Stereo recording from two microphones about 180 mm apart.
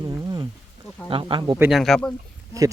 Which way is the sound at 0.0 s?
20° right (ahead or behind).